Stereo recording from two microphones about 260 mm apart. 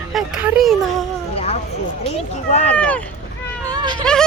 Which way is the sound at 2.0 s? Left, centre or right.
Left.